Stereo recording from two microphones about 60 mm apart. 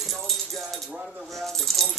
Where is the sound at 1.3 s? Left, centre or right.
Centre.